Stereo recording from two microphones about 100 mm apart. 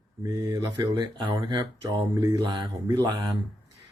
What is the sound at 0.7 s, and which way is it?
Speech, 50° right (ahead or behind).